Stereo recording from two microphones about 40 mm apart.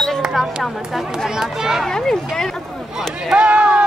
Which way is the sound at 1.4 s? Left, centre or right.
Centre.